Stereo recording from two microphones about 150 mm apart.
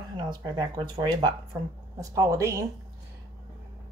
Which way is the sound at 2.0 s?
20° right (ahead or behind).